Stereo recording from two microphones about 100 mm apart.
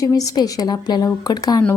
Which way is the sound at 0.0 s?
35° left (ahead or behind).